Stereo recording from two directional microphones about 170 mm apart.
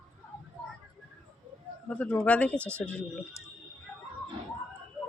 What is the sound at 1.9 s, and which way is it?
Speech, 5° left (ahead or behind).